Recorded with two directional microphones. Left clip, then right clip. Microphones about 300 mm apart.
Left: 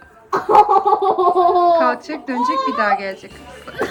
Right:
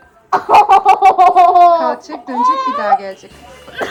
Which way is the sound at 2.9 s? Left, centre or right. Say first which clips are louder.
Right 5 dB; centre.